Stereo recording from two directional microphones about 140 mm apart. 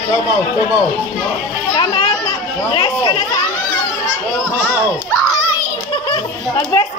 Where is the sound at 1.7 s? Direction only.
30° left (ahead or behind).